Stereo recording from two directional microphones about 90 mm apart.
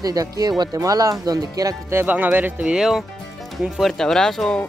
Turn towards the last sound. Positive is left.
turn(degrees=5)  # may be behind; listen again after turning